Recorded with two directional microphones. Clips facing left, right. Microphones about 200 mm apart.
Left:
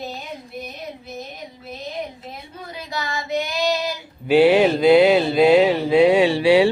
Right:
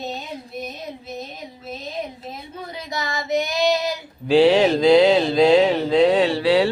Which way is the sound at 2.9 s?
20° right (ahead or behind).